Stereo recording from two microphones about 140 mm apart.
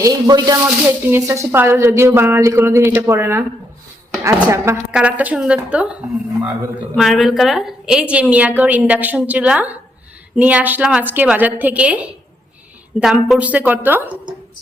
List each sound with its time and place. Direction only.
0.0 s speech: 25° right (ahead or behind)
0.9 s a woman's voice: 15° right (ahead or behind)